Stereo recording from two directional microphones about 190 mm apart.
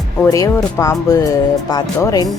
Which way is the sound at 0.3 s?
20° left (ahead or behind).